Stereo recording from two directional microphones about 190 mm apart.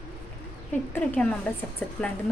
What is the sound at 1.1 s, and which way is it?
Speech, 5° left (ahead or behind).